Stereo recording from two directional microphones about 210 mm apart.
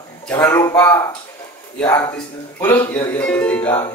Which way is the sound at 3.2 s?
5° left (ahead or behind).